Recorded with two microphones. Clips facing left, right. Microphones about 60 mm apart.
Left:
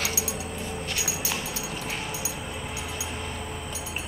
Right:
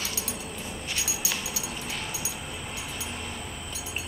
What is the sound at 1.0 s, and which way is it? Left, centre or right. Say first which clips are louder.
Dog: left 2 dB; left.